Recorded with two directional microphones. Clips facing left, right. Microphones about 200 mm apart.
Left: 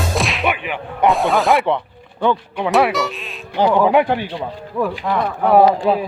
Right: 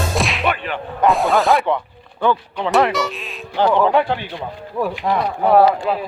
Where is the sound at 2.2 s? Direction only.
15° left (ahead or behind).